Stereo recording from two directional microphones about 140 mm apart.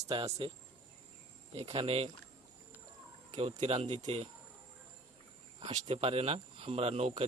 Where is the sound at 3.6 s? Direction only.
45° right (ahead or behind).